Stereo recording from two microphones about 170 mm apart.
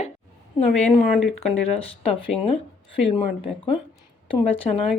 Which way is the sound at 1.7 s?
35° left (ahead or behind).